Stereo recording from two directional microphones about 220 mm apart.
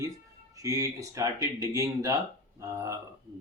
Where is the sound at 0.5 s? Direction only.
15° right (ahead or behind).